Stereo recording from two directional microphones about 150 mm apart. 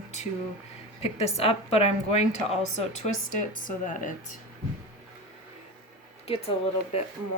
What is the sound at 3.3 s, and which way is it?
Speech, 60° left (ahead or behind).